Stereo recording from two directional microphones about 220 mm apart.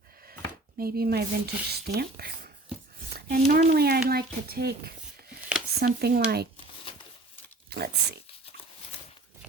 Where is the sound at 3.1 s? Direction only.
45° right (ahead or behind).